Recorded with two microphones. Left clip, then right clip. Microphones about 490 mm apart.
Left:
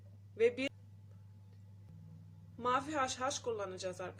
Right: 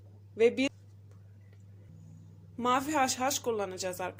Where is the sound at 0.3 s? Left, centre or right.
Left.